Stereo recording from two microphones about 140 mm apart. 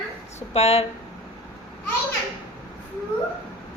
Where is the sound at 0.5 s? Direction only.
45° left (ahead or behind).